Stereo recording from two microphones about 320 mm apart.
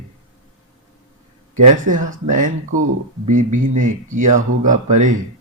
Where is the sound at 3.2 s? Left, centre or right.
Right.